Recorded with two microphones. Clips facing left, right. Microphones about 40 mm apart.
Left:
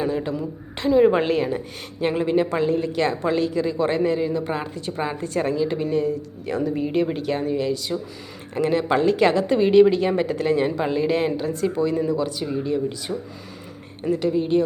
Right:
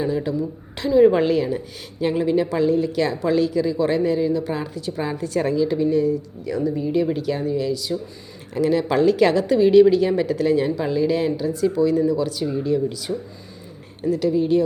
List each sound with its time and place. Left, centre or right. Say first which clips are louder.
0.3 s speech: right 3 dB; left
0.9 s speech: right 3 dB; left
5.4 s a woman's voice: right 2 dB; left
5.9 s a woman's voice: right 3 dB; left